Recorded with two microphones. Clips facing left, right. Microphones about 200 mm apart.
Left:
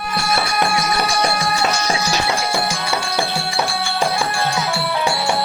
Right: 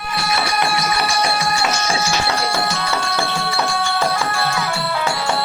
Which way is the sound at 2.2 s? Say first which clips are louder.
Even; 15° left (ahead or behind).